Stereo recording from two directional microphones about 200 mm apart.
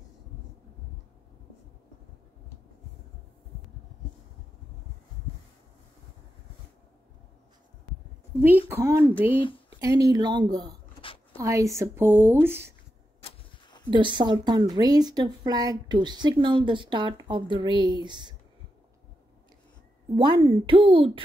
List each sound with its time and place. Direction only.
8.4 s a woman's voice: 10° right (ahead or behind)
13.8 s a woman's voice: 25° right (ahead or behind)
20.2 s a woman's voice: 25° right (ahead or behind)